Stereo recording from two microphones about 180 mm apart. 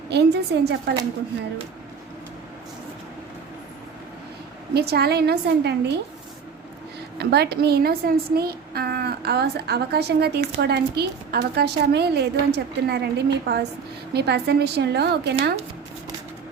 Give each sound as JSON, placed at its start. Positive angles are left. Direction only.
{"t": 0.1, "sound": "a woman's voice", "side_deg": -65}
{"t": 4.7, "sound": "a woman's voice", "side_deg": -65}
{"t": 7.2, "sound": "a woman's voice", "side_deg": -65}